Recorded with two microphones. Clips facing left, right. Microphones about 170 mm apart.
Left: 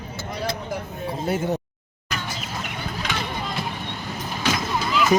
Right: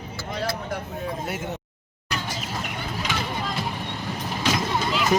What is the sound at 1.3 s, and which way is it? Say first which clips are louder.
Speech: left 7 dB; 35° left (ahead or behind).